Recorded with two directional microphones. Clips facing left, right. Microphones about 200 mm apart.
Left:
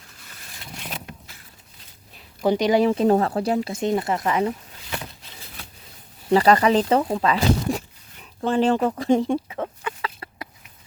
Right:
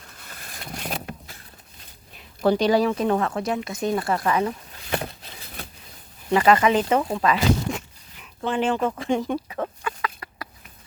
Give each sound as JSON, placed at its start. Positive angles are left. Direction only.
{"t": 0.2, "sound": "vehicle", "side_deg": -55}
{"t": 2.4, "sound": "speech", "side_deg": 15}
{"t": 4.9, "sound": "a sound", "side_deg": -50}
{"t": 6.3, "sound": "speech", "side_deg": 35}
{"t": 10.0, "sound": "chicken", "side_deg": 25}